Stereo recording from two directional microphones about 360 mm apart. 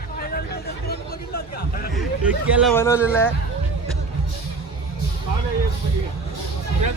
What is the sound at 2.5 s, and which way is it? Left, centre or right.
Speech, centre.